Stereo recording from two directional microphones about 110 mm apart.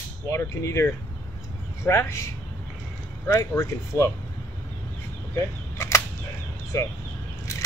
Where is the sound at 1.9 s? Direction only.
25° left (ahead or behind).